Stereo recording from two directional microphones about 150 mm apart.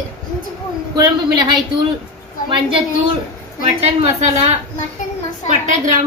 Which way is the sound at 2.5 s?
35° right (ahead or behind).